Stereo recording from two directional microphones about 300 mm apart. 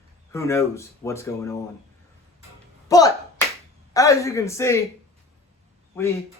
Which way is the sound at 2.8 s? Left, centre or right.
Centre.